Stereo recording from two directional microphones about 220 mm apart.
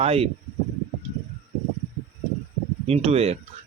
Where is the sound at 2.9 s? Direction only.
30° right (ahead or behind).